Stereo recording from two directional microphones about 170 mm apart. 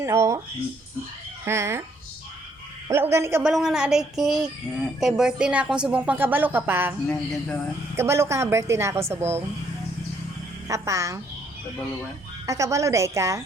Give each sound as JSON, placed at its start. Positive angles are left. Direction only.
{"t": 0.0, "sound": "a woman's voice", "side_deg": -15}
{"t": 1.5, "sound": "a woman's voice", "side_deg": -15}
{"t": 2.9, "sound": "a woman's voice", "side_deg": -15}
{"t": 3.4, "sound": "speech", "side_deg": 0}
{"t": 7.9, "sound": "a woman's voice", "side_deg": -15}
{"t": 10.7, "sound": "a woman's voice", "side_deg": -20}
{"t": 12.5, "sound": "a woman's voice", "side_deg": -20}